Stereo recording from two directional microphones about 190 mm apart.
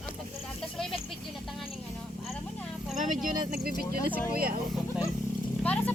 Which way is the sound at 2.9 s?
45° right (ahead or behind).